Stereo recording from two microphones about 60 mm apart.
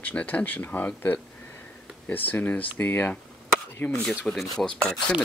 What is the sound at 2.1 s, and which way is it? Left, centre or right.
Speech, left.